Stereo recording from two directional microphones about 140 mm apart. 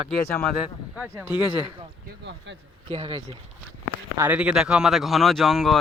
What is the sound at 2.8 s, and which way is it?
Speech, 45° right (ahead or behind).